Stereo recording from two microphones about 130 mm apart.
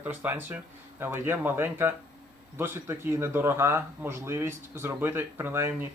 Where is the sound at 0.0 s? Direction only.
15° right (ahead or behind).